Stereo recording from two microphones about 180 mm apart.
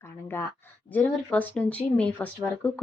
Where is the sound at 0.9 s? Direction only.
10° left (ahead or behind).